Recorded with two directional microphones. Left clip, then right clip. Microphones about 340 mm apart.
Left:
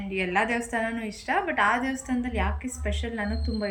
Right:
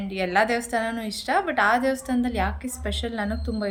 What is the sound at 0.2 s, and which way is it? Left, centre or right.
Speech, right.